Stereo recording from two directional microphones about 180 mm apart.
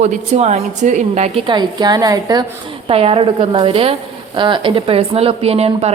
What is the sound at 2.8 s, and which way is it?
A woman's voice, 35° right (ahead or behind).